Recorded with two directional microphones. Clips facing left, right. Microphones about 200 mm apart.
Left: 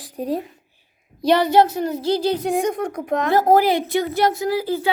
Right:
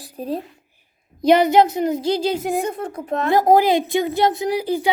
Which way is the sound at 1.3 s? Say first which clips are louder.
Right 2 dB; 15° right (ahead or behind).